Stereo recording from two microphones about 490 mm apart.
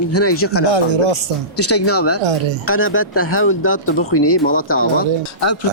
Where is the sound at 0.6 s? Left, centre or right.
Right.